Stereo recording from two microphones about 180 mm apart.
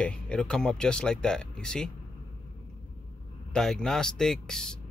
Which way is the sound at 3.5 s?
5° left (ahead or behind).